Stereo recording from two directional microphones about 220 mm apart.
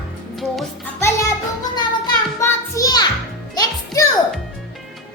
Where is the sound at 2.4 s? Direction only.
15° left (ahead or behind).